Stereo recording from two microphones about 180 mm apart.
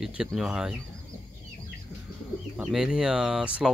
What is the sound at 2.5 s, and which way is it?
Speech, 5° right (ahead or behind).